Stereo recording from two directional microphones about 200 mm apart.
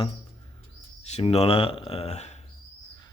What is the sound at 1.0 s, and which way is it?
Speech, 30° left (ahead or behind).